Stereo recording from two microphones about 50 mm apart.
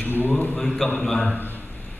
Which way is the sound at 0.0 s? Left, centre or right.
Left.